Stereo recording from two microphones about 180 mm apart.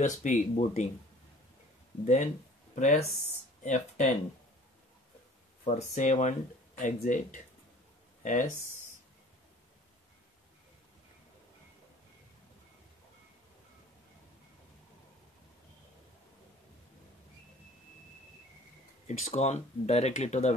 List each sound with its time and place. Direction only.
0.2 s speech: 40° left (ahead or behind)
2.0 s speech: 40° left (ahead or behind)
5.7 s speech: 40° left (ahead or behind)
19.0 s speech: 40° left (ahead or behind)